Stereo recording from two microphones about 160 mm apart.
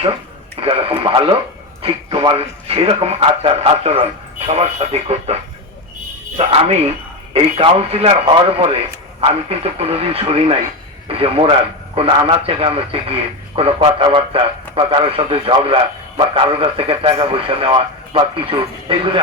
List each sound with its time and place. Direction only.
0.6 s a man's voice: 35° right (ahead or behind)